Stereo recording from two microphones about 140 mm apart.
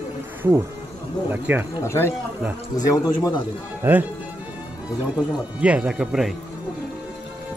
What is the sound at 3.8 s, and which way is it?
Speech, 15° right (ahead or behind).